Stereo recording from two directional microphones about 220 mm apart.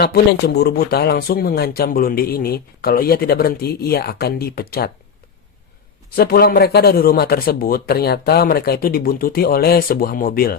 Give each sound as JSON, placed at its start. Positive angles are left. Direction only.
{"t": 0.0, "sound": "speech", "side_deg": 45}
{"t": 6.1, "sound": "speech", "side_deg": 45}